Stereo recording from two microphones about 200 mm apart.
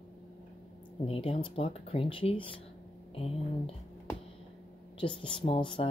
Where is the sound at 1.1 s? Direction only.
30° left (ahead or behind).